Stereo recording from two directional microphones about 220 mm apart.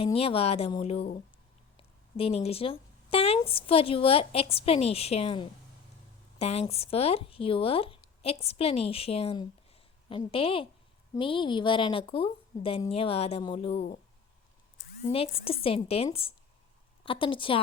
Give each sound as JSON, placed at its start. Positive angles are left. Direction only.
{"t": 0.0, "sound": "speech", "side_deg": 25}
{"t": 13.7, "sound": "speech", "side_deg": 40}
{"t": 15.0, "sound": "speech", "side_deg": 25}